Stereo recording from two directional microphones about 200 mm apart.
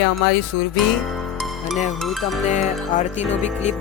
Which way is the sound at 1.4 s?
Centre (ahead or behind).